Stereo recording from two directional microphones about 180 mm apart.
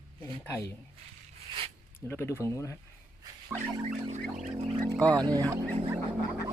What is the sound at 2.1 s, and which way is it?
Speech, 15° left (ahead or behind).